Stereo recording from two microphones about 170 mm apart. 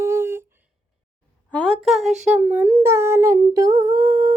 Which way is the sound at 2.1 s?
45° right (ahead or behind).